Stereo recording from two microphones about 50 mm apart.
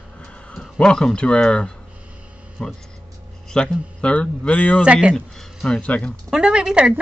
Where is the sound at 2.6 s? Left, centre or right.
Centre.